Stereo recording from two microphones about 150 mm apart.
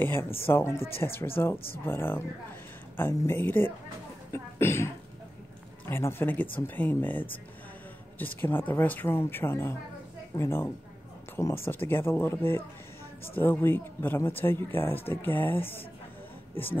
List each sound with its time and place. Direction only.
0.0 s speech: 15° left (ahead or behind)